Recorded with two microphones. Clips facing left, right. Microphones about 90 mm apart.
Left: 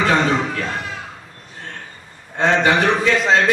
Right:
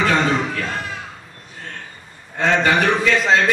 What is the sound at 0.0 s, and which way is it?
Speech, 15° left (ahead or behind).